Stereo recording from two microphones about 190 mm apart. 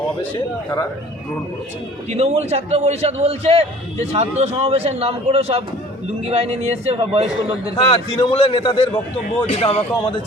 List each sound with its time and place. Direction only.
2.0 s a man's voice: 35° right (ahead or behind)
7.8 s a man's voice: 30° left (ahead or behind)